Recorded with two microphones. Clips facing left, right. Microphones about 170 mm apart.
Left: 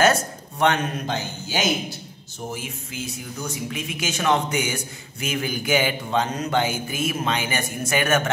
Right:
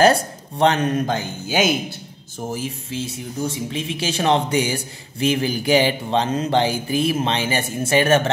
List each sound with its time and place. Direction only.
0.0 s speech: 30° right (ahead or behind)
0.9 s speech: 50° right (ahead or behind)
2.5 s speech: 30° right (ahead or behind)